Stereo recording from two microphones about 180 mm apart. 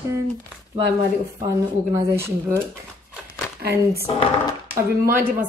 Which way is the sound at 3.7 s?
15° right (ahead or behind).